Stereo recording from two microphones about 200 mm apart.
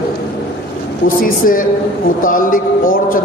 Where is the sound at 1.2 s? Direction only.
45° left (ahead or behind).